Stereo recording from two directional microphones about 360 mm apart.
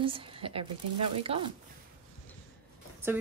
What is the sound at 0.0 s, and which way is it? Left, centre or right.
Speech, centre.